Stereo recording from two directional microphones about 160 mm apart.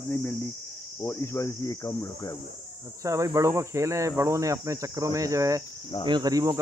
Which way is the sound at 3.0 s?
20° right (ahead or behind).